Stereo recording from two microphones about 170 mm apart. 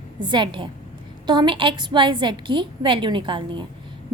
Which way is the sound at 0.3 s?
30° right (ahead or behind).